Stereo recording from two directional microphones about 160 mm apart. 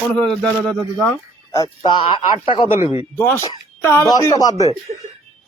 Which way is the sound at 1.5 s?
25° left (ahead or behind).